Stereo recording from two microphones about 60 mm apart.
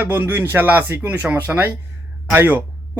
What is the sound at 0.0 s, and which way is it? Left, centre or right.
A man's voice, right.